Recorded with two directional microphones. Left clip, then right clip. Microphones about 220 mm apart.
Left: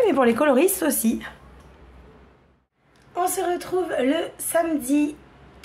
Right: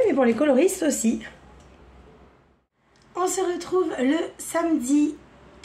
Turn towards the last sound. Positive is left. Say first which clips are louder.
# right 1 dB
turn(degrees=0)  # may be behind; listen again after turning